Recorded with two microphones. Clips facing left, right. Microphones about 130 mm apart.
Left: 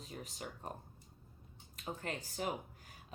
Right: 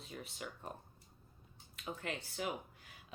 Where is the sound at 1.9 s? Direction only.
40° left (ahead or behind).